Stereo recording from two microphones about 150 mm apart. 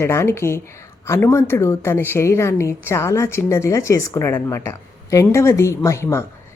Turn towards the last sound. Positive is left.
turn(degrees=15)  # may be behind; listen again after turning